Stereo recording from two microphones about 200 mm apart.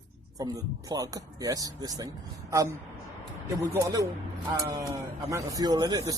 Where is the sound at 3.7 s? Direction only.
15° right (ahead or behind).